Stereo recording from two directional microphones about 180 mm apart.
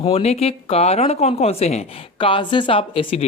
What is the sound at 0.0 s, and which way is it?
Speech, 35° left (ahead or behind).